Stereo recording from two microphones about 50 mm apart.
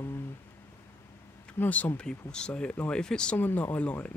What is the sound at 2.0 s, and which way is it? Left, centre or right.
Speech, centre.